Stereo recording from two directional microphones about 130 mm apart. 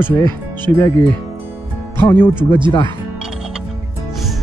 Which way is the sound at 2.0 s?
20° left (ahead or behind).